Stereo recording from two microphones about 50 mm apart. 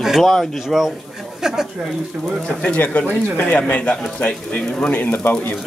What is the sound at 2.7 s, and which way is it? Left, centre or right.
Speech, left.